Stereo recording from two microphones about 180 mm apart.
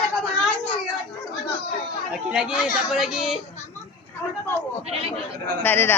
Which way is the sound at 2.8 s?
Centre (ahead or behind).